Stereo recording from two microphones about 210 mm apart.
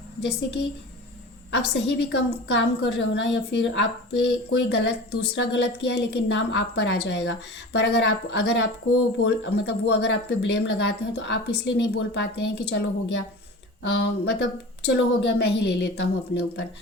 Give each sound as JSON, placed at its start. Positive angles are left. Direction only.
{"t": 0.2, "sound": "a woman's voice", "side_deg": 55}